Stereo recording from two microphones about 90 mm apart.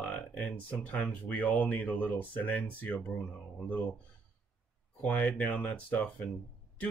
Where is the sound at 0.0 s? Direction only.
15° left (ahead or behind).